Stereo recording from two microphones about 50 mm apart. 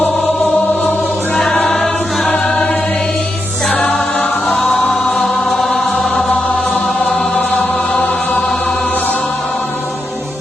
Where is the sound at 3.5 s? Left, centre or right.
Centre.